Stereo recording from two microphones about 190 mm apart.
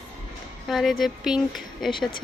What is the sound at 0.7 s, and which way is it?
Speech, centre (ahead or behind).